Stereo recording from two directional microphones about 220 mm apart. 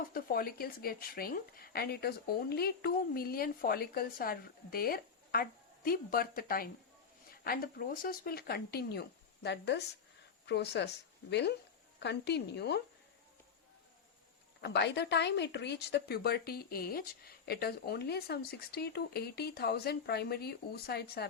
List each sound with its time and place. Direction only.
0.1 s speech: 40° left (ahead or behind)
14.6 s speech: 50° left (ahead or behind)